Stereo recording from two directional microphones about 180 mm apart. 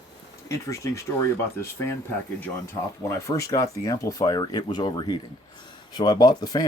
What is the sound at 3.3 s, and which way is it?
Speech, 20° left (ahead or behind).